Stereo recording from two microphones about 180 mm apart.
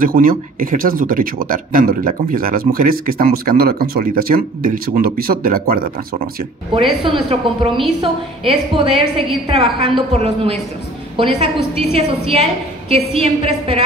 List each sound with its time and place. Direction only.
0.0 s speech: 50° right (ahead or behind)
6.7 s a woman's voice: 30° right (ahead or behind)